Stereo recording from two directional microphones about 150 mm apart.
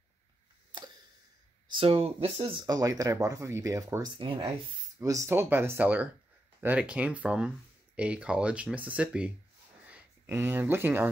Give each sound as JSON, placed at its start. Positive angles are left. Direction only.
{"t": 0.7, "sound": "a sound", "side_deg": -30}
{"t": 1.7, "sound": "speech", "side_deg": -40}
{"t": 2.6, "sound": "speech", "side_deg": -25}
{"t": 4.2, "sound": "speech", "side_deg": -35}
{"t": 5.0, "sound": "speech", "side_deg": -20}